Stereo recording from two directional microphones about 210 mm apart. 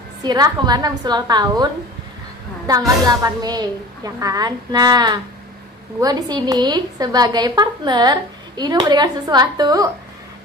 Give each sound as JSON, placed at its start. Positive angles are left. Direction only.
{"t": 0.2, "sound": "a woman's voice", "side_deg": -20}
{"t": 3.1, "sound": "a woman's voice", "side_deg": -15}